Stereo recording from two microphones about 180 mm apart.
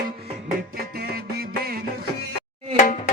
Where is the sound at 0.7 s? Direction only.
60° right (ahead or behind).